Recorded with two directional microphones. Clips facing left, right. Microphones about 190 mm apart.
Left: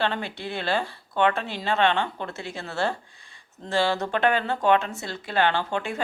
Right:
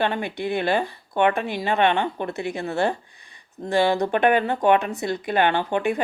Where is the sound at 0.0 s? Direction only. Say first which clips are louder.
Right 4 dB; 15° right (ahead or behind).